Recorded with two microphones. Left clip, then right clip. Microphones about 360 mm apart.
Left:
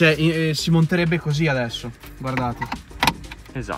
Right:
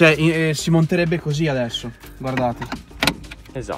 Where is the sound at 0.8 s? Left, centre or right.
Centre.